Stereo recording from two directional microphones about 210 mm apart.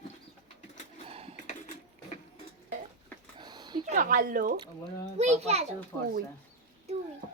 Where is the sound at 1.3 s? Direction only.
35° left (ahead or behind).